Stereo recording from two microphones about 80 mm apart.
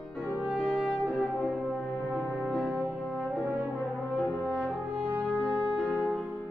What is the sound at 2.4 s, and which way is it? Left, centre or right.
Music, centre.